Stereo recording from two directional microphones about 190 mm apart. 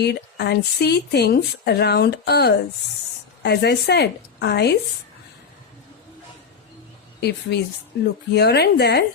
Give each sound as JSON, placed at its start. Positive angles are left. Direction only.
{"t": 0.0, "sound": "speech", "side_deg": 60}
{"t": 7.2, "sound": "speech", "side_deg": 60}